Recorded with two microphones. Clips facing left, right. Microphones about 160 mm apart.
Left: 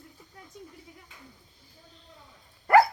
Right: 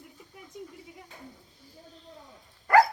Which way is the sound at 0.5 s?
15° right (ahead or behind).